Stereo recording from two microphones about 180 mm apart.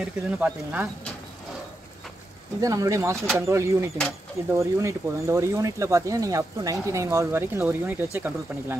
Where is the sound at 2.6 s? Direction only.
20° right (ahead or behind).